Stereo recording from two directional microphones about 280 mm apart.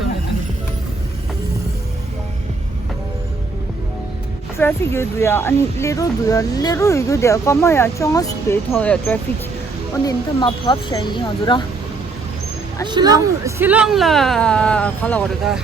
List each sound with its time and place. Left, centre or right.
4.5 s speech: centre
10.1 s speech: centre
12.9 s speech: centre